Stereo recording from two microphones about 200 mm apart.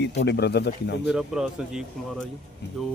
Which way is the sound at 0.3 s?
55° left (ahead or behind).